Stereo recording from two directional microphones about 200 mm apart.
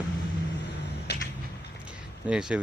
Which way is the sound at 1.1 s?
55° left (ahead or behind).